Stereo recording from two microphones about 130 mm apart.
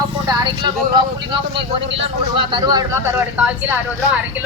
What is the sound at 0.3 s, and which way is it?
Speech, 35° right (ahead or behind).